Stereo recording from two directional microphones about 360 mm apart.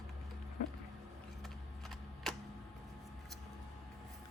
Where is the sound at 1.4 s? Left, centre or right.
Centre.